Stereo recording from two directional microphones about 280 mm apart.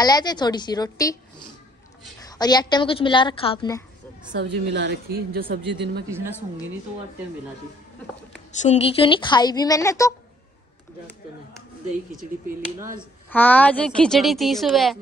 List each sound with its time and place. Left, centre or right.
0.0 s a woman's voice: centre
2.2 s a woman's voice: centre
4.3 s a woman's voice: right
6.0 s a woman's voice: centre
8.6 s a woman's voice: left
12.2 s speech: right
13.3 s a woman's voice: centre